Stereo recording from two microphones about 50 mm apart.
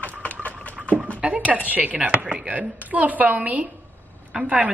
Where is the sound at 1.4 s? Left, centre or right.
Right.